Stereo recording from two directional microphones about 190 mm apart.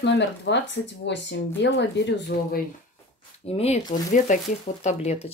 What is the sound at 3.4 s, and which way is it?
Speech, 35° left (ahead or behind).